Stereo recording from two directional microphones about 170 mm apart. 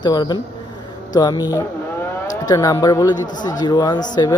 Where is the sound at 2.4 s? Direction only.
20° left (ahead or behind).